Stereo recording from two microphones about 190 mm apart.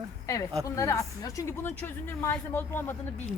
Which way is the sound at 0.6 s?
15° left (ahead or behind).